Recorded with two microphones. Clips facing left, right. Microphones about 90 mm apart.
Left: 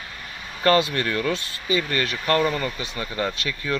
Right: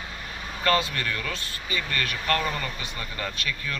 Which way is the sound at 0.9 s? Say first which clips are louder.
Left 7 dB; 35° left (ahead or behind).